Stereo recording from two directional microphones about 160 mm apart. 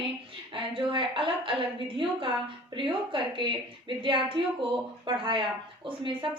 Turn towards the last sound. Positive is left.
turn(degrees=-30)  # may be behind; listen again after turning